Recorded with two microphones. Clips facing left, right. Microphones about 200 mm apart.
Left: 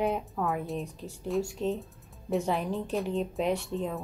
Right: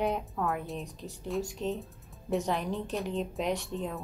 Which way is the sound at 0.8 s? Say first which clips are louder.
Left 2 dB; 40° right (ahead or behind).